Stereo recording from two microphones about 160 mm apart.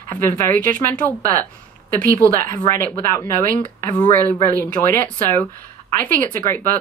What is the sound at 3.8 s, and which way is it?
Speech, 10° left (ahead or behind).